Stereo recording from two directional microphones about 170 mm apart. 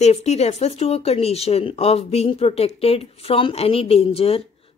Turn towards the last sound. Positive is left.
turn(degrees=35)  # may be behind; listen again after turning